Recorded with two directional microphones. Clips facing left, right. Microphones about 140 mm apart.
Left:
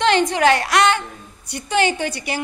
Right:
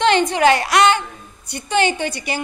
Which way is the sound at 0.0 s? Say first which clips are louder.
Right 1 dB; centre (ahead or behind).